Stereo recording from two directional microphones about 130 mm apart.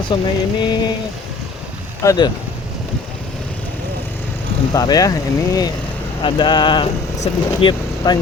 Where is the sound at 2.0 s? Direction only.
35° left (ahead or behind).